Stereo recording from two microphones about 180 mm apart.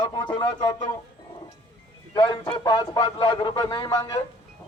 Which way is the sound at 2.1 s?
20° left (ahead or behind).